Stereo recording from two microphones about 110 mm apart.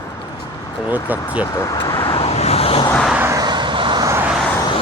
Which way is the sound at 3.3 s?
40° right (ahead or behind).